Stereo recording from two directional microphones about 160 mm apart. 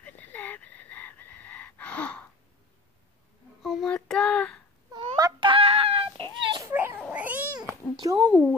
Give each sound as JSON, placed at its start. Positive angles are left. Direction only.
{"t": 0.0, "sound": "chicken", "side_deg": 10}
{"t": 3.6, "sound": "child singing", "side_deg": 0}
{"t": 4.9, "sound": "a sound", "side_deg": -25}
{"t": 6.4, "sound": "children playing", "side_deg": -30}
{"t": 6.7, "sound": "baby cry", "side_deg": -10}
{"t": 7.0, "sound": "babbling", "side_deg": -10}
{"t": 8.0, "sound": "a sound", "side_deg": -25}